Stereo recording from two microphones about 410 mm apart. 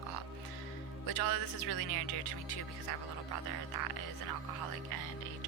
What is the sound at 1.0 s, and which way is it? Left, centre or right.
Speech, left.